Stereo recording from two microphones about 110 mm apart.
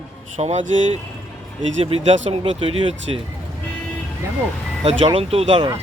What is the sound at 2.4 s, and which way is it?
Speech, 55° right (ahead or behind).